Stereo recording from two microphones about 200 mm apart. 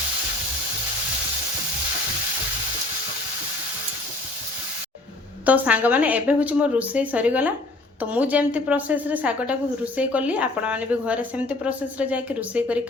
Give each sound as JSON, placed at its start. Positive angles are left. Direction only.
{"t": 5.5, "sound": "speech", "side_deg": -5}